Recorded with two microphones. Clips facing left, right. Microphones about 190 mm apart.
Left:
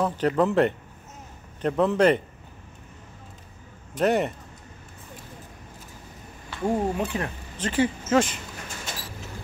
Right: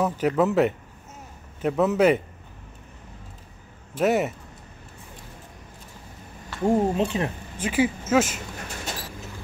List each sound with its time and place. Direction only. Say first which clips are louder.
0.0 s speech: right 1 dB; 5° right (ahead or behind)
3.9 s speech: right 1 dB; 5° right (ahead or behind)
6.6 s speech: right 4 dB; 20° right (ahead or behind)
7.5 s speech: right 1 dB; 10° right (ahead or behind)